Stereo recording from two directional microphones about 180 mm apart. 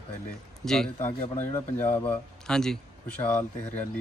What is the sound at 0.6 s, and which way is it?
A man's voice, 5° left (ahead or behind).